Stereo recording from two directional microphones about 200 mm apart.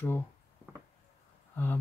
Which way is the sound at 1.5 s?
10° left (ahead or behind).